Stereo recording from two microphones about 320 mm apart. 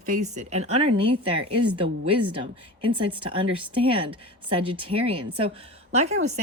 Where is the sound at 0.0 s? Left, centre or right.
Right.